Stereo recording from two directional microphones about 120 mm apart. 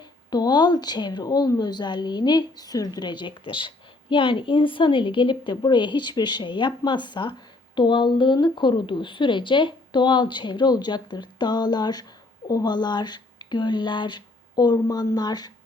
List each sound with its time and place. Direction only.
0.3 s a woman's voice: 35° left (ahead or behind)